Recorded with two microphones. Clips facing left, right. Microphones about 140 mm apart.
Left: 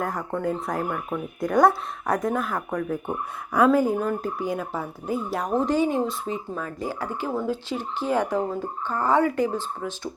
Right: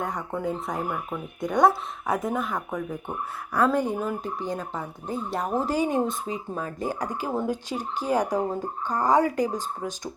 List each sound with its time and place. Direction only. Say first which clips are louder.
0.0 s speech: left 2 dB; centre (ahead or behind)
3.1 s speech: left 3 dB; 15° left (ahead or behind)
3.9 s speech: left 3 dB; 10° right (ahead or behind)
4.2 s speech: left 3 dB; 5° left (ahead or behind); by 6.0 s 15° right (ahead or behind)
7.3 s speech: left 1 dB; 15° right (ahead or behind)
7.7 s speech: left 1 dB; 40° right (ahead or behind)
8.1 s speech: even; 15° right (ahead or behind)
9.2 s speech: left 2 dB; 35° right (ahead or behind)